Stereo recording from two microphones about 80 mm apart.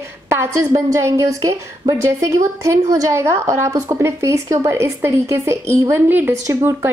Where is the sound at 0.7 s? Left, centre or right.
Right.